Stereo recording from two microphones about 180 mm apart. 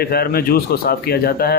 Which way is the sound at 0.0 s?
60° left (ahead or behind).